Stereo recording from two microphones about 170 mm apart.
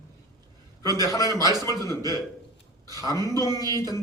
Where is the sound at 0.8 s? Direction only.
20° left (ahead or behind).